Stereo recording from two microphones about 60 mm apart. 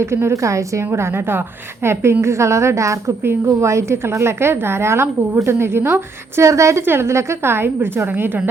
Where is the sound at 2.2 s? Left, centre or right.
Right.